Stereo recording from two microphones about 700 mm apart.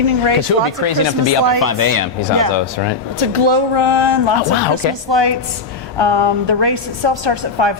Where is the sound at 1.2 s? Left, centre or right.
Right.